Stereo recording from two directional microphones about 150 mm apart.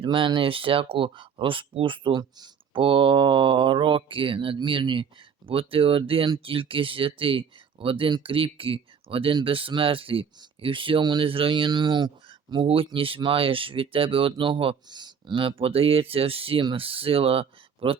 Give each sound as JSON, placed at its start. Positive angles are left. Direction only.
{"t": 0.0, "sound": "speech", "side_deg": -35}